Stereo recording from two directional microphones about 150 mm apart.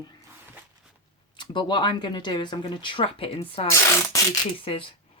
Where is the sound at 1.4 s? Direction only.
30° left (ahead or behind).